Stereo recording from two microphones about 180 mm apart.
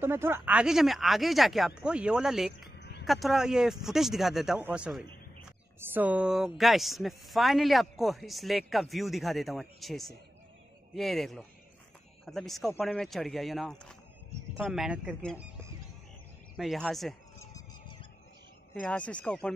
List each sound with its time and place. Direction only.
0.0 s speech: 10° right (ahead or behind)
2.8 s a sound: 70° left (ahead or behind)
3.1 s speech: centre (ahead or behind)
16.5 s speech: centre (ahead or behind)
17.4 s a sound: 20° left (ahead or behind)
18.8 s speech: 5° left (ahead or behind)